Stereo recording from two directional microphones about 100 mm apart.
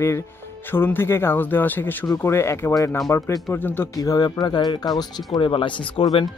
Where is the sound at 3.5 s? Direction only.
20° left (ahead or behind).